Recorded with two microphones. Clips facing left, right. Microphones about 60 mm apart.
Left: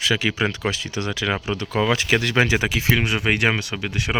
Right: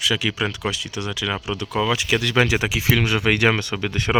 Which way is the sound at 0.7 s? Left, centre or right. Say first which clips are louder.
Left 1 dB; left.